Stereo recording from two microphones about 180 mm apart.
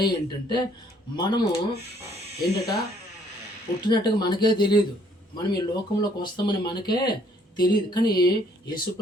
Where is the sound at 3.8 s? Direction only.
25° left (ahead or behind).